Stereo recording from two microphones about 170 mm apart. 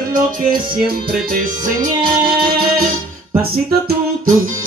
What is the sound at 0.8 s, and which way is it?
Music, 60° right (ahead or behind).